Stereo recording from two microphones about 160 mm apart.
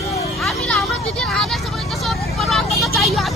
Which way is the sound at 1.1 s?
Centre (ahead or behind).